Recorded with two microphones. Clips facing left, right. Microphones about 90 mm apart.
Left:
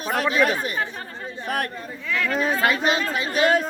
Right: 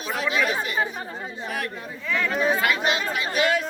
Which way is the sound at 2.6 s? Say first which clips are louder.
Left 2 dB; 35° left (ahead or behind).